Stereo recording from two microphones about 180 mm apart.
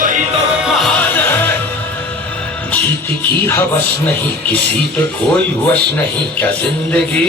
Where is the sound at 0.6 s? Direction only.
Centre (ahead or behind).